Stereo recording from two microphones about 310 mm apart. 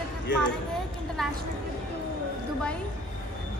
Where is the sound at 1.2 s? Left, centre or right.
Centre.